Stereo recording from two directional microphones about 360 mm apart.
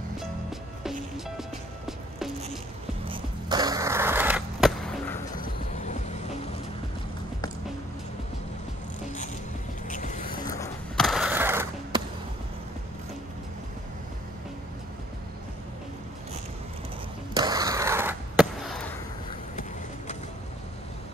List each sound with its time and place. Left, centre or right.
0.2 s music: centre
3.1 s skateboard: centre
5.4 s vehicle: centre
9.8 s vehicle: left
10.4 s skateboard: centre
17.4 s a sound: centre